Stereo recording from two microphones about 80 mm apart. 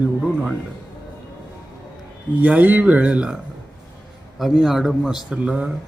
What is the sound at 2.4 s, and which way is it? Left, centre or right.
Speech, right.